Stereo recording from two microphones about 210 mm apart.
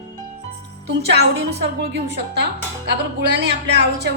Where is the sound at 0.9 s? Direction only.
55° right (ahead or behind).